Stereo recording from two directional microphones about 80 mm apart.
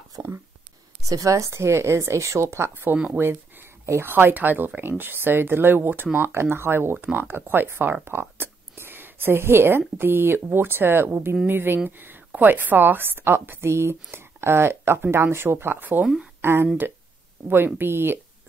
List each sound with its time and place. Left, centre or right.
0.1 s speech: right
16.3 s a sound: right
17.6 s speech: right